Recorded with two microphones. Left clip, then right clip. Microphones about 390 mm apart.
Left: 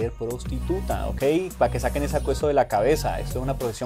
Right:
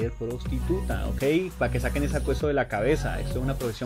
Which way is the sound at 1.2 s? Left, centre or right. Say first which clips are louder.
Left 3 dB; left.